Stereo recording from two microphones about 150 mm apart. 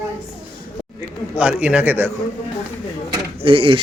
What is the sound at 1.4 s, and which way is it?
Speech, 10° right (ahead or behind).